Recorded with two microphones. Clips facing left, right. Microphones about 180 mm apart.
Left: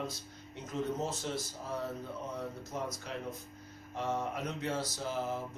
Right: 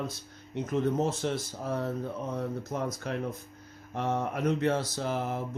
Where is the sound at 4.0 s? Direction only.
60° right (ahead or behind).